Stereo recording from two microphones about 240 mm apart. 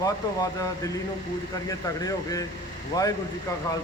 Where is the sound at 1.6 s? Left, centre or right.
Centre.